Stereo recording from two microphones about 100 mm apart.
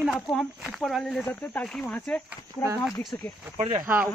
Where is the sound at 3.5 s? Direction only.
90° right.